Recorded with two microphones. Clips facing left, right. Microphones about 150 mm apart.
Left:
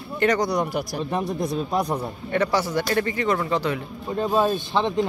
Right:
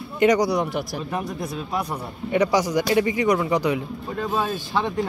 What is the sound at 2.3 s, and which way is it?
Speech, 15° right (ahead or behind).